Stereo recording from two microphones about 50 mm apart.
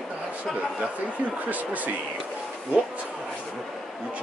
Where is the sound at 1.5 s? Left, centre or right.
Right.